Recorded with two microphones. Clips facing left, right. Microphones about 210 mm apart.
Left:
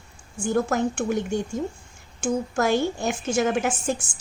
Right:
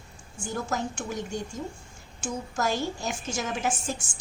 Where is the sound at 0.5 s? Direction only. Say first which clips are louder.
Left 8 dB; 60° left (ahead or behind).